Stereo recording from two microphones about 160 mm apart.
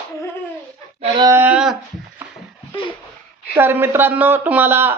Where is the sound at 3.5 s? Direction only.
15° right (ahead or behind).